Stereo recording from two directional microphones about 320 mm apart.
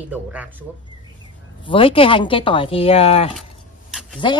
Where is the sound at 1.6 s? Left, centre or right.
Centre.